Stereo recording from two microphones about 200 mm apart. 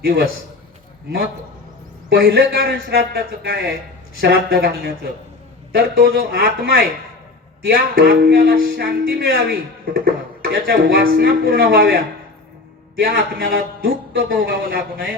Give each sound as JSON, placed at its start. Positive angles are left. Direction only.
{"t": 0.0, "sound": "speech", "side_deg": -50}
{"t": 2.0, "sound": "speech", "side_deg": -50}
{"t": 13.0, "sound": "speech", "side_deg": -50}